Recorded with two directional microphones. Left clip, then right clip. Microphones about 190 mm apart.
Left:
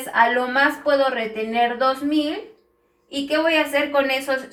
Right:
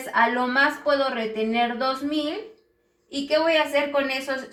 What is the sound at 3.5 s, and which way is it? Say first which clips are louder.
Speech: left 2 dB; 20° left (ahead or behind).